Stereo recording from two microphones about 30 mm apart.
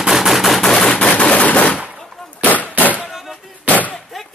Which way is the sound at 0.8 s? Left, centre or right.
Left.